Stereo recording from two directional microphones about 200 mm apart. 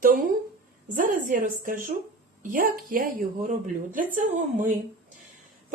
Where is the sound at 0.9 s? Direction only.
45° right (ahead or behind).